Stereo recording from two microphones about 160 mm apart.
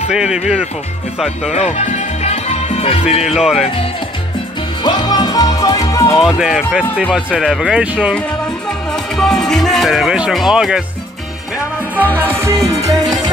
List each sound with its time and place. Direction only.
0.1 s speech: 5° right (ahead or behind)
1.5 s music: 45° left (ahead or behind)
3.3 s speech: 5° right (ahead or behind)
4.8 s music: 25° left (ahead or behind)
6.1 s speech: 5° right (ahead or behind)
8.6 s music: 5° left (ahead or behind)
12.0 s music: 10° left (ahead or behind)
12.3 s music: 15° right (ahead or behind)